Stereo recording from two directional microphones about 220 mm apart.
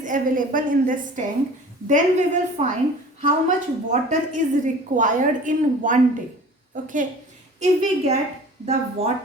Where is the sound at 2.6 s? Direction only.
30° right (ahead or behind).